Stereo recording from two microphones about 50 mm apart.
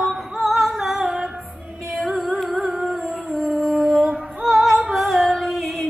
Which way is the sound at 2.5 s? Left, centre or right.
Centre.